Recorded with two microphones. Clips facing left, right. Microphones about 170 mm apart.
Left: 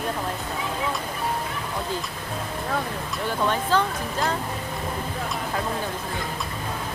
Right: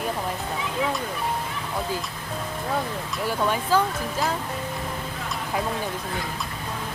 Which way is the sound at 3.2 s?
10° right (ahead or behind).